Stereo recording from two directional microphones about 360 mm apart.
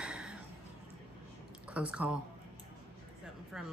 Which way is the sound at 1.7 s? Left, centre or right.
Centre.